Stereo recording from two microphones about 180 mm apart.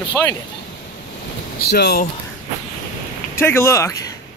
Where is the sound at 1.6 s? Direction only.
65° left (ahead or behind).